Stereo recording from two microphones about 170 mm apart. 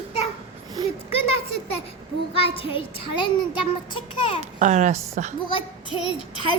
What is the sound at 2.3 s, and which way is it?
Speech, 35° left (ahead or behind).